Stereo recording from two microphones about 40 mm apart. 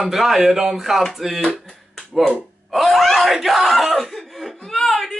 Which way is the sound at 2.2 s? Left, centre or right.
Centre.